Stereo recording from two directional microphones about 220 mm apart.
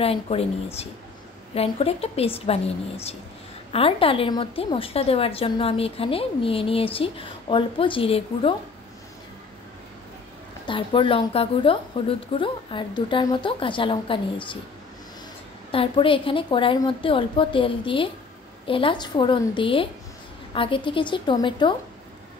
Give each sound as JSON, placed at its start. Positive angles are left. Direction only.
{"t": 0.0, "sound": "a woman's voice", "side_deg": 25}
{"t": 1.5, "sound": "a woman's voice", "side_deg": 25}
{"t": 10.6, "sound": "a woman's voice", "side_deg": 20}
{"t": 15.7, "sound": "a woman's voice", "side_deg": 25}